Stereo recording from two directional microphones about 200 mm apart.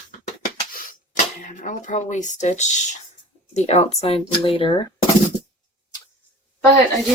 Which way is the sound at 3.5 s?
35° left (ahead or behind).